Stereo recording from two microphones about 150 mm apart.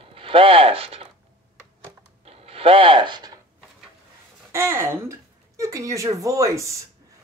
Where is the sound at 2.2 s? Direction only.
40° right (ahead or behind).